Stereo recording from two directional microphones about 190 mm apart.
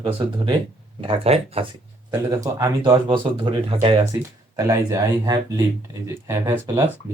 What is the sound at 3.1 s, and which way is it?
Speech, 25° right (ahead or behind).